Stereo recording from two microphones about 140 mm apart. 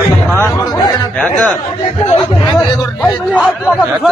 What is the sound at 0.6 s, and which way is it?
Chatter, 30° left (ahead or behind).